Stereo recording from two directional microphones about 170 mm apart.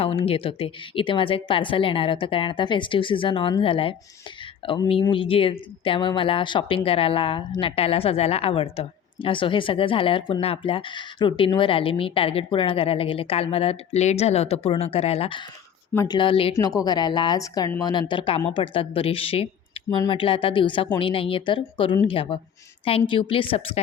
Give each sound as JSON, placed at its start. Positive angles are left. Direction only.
{"t": 0.0, "sound": "speech", "side_deg": 35}
{"t": 16.6, "sound": "speech", "side_deg": 20}